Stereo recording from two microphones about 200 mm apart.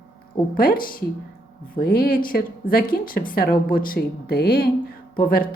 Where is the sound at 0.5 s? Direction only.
45° left (ahead or behind).